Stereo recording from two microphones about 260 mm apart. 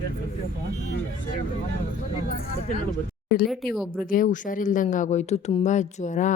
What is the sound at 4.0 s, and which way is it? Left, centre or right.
Speech, left.